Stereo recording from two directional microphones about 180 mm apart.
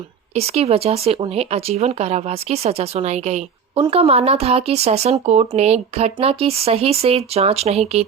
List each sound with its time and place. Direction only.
0.3 s speech: 35° right (ahead or behind)